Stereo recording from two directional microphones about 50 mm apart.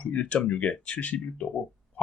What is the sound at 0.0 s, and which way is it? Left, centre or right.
Speech, left.